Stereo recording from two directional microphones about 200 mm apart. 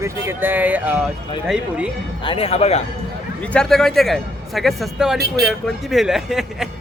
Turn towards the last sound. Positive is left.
turn(degrees=0)  # may be behind; listen again after turning